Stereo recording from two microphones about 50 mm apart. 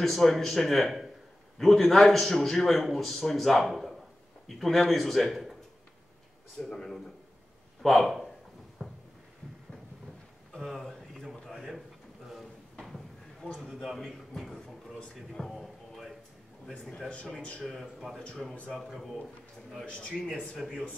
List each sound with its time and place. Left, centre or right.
0.0 s a man's voice: centre
6.6 s a man's voice: centre
8.8 s a sound: centre
10.5 s a sound: centre
17.6 s a man's voice: centre
19.8 s speech: left